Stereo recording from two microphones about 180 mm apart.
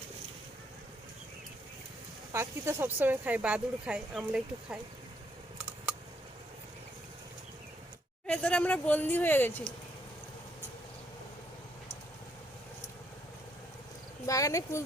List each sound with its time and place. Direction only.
2.3 s speech: 15° right (ahead or behind)
5.5 s typing: 5° right (ahead or behind)
8.3 s a woman's voice: 5° left (ahead or behind)
14.3 s a woman's voice: 20° left (ahead or behind)